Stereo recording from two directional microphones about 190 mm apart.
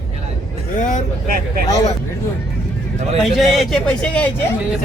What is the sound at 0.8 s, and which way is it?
Vehicle, 40° left (ahead or behind).